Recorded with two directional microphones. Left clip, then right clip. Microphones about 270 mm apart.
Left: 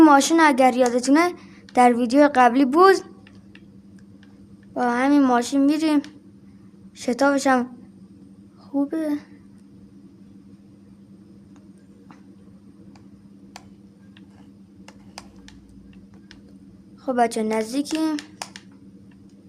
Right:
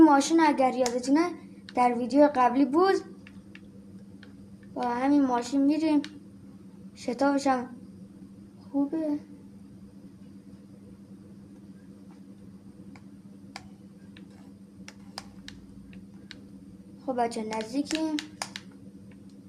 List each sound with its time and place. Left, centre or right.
0.0 s a woman's voice: left
4.7 s a woman's voice: left
7.0 s a woman's voice: left
8.7 s a woman's voice: left
17.1 s a woman's voice: left
18.2 s a sound: centre